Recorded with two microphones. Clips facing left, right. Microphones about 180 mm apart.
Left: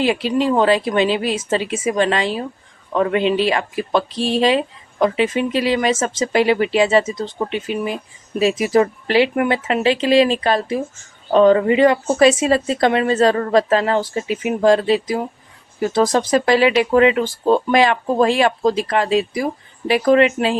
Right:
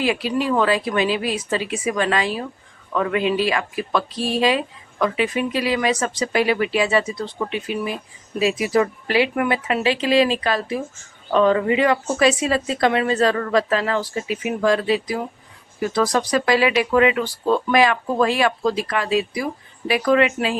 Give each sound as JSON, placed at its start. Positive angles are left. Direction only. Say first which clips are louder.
{"t": 0.0, "sound": "a woman's voice", "louder": "left 4 dB", "side_deg": 25}